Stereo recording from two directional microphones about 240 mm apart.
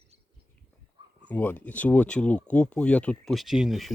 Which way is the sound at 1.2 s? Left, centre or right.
Centre.